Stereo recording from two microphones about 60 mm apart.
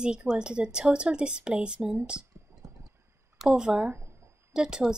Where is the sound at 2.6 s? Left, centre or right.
Right.